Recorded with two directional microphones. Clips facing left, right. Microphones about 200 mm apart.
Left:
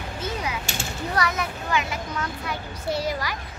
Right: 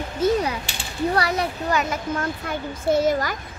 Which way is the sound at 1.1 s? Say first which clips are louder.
Even; 35° right (ahead or behind).